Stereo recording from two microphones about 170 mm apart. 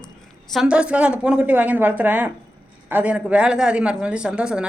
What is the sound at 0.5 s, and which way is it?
A woman's voice, 5° right (ahead or behind).